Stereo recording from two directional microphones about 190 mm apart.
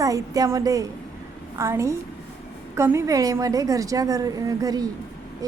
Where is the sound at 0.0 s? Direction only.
15° right (ahead or behind).